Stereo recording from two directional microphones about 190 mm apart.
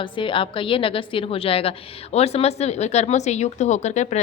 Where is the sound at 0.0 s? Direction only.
25° left (ahead or behind).